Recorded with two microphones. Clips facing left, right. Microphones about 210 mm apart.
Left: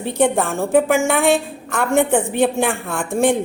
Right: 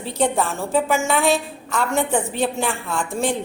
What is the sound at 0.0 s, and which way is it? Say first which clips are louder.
A woman's voice: left 4 dB; 55° left (ahead or behind).